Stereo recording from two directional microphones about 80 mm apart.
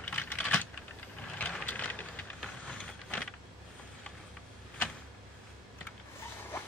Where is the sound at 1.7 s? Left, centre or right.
Centre.